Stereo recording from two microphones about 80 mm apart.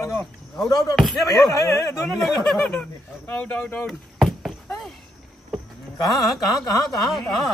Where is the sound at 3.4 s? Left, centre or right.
Centre.